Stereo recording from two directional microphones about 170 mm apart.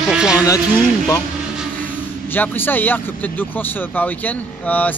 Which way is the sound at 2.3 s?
10° left (ahead or behind).